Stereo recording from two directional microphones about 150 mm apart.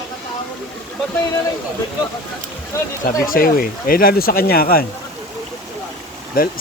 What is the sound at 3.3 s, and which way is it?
Speech, 70° left (ahead or behind).